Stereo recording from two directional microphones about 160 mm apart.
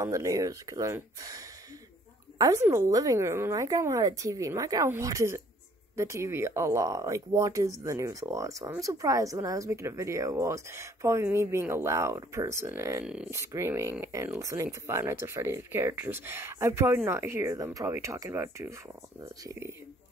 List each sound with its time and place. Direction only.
0.0 s speech: 20° right (ahead or behind)
13.0 s speech: 5° right (ahead or behind)
13.3 s speech: 15° right (ahead or behind)